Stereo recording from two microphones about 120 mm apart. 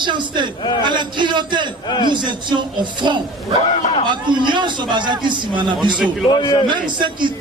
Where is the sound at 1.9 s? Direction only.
35° left (ahead or behind).